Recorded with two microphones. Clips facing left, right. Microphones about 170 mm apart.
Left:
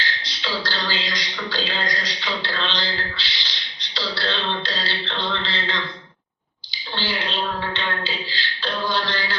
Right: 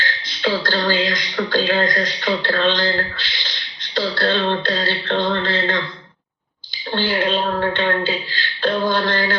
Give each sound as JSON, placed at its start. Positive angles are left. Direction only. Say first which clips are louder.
{"t": 0.0, "sound": "speech", "louder": "right 8 dB", "side_deg": -50}
{"t": 6.9, "sound": "beatboxing", "louder": "right 8 dB", "side_deg": -50}